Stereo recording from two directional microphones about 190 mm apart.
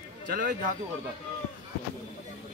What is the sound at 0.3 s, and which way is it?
Speech, 45° right (ahead or behind).